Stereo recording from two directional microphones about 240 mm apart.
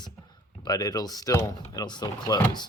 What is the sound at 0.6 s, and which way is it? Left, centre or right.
Speech, centre.